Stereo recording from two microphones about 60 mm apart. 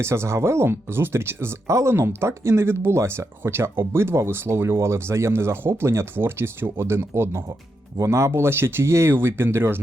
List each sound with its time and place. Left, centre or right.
0.0 s speech: right